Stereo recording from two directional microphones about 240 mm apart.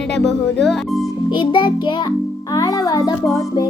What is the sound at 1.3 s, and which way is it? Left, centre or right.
Music, centre.